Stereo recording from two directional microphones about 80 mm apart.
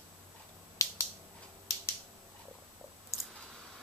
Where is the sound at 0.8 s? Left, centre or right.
Left.